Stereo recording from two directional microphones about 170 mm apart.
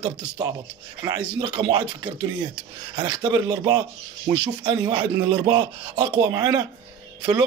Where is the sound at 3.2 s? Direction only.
25° right (ahead or behind).